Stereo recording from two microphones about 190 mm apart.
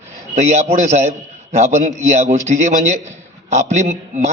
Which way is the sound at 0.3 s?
35° right (ahead or behind).